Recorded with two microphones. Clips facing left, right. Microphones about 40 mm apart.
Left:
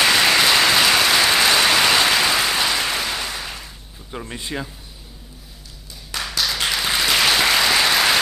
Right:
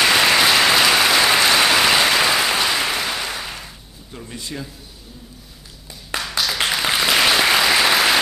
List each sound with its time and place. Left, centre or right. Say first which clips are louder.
0.0 s applause: right 1 dB; centre
4.1 s a man's voice: left 3 dB; left
6.1 s a sound: right 2 dB; right
6.6 s applause: right 3 dB; centre